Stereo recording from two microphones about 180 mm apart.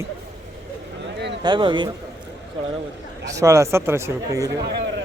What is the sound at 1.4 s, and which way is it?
Speech, 25° right (ahead or behind).